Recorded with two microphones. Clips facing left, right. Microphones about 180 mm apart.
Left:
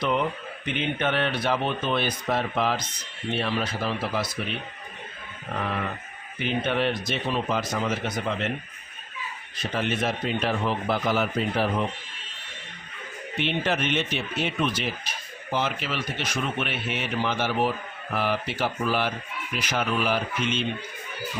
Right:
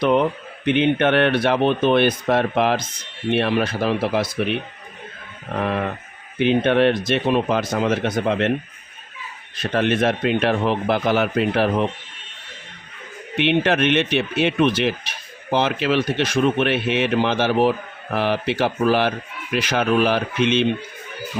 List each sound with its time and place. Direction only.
0.0 s speech: 65° right (ahead or behind)
5.5 s speech: 60° right (ahead or behind)
6.4 s speech: 70° right (ahead or behind)
9.7 s speech: 65° right (ahead or behind)
13.3 s speech: 70° right (ahead or behind)